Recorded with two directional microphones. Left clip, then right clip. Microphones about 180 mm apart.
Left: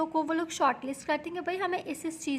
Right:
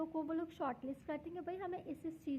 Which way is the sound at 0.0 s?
20° left (ahead or behind).